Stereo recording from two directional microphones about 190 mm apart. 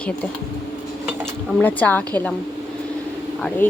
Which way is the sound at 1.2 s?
10° left (ahead or behind).